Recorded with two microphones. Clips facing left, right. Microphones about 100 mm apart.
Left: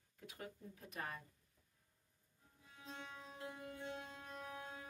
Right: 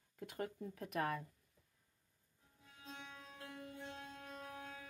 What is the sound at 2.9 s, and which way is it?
Music, 15° left (ahead or behind).